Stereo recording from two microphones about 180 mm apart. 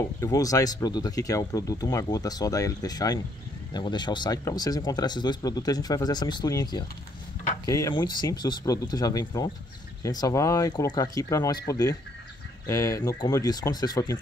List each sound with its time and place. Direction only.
0.2 s speech: 20° left (ahead or behind)